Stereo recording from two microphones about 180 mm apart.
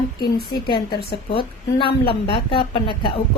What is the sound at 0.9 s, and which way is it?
Speech, 60° left (ahead or behind).